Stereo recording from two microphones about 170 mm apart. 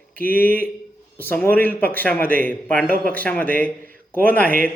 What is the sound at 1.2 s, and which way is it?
A man's voice, 10° left (ahead or behind).